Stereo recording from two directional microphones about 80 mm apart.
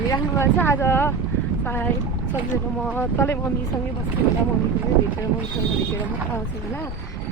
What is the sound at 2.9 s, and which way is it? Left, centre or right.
Speech, left.